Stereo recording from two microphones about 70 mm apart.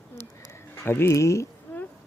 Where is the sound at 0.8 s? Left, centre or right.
Left.